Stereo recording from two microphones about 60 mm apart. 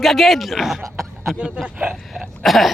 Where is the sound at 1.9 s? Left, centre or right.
Centre.